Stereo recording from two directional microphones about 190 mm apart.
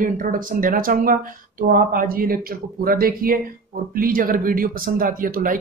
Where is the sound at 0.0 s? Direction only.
45° right (ahead or behind).